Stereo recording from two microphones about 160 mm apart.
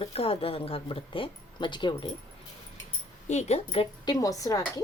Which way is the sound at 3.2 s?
45° left (ahead or behind).